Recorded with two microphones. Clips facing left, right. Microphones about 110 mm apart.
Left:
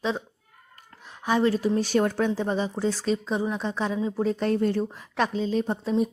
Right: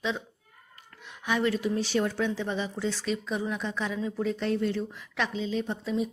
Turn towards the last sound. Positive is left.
turn(degrees=40)  # may be behind; listen again after turning